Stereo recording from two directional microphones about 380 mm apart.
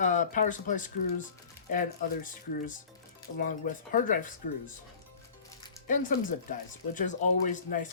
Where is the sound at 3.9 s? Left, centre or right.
Left.